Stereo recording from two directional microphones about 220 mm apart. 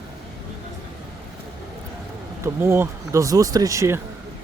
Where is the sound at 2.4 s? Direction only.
10° right (ahead or behind).